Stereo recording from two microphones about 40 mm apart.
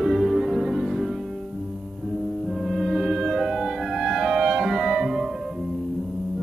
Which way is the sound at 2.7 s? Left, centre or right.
Centre.